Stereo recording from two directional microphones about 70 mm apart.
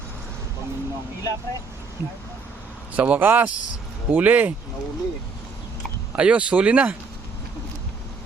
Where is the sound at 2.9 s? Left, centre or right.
Right.